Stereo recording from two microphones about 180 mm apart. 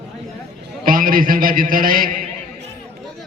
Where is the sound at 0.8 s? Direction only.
50° right (ahead or behind).